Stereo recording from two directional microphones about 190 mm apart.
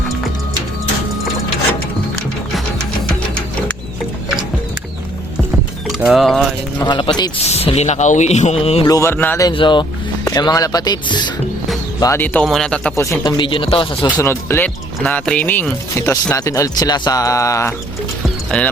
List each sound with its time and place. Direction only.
5.9 s speech: centre (ahead or behind)
6.7 s speech: 25° left (ahead or behind)
8.9 s speech: 15° left (ahead or behind)
9.5 s speech: 25° left (ahead or behind)
14.2 s speech: 15° left (ahead or behind)
18.5 s speech: 5° left (ahead or behind)